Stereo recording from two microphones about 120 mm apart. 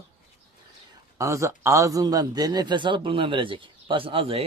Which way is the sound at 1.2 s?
25° right (ahead or behind).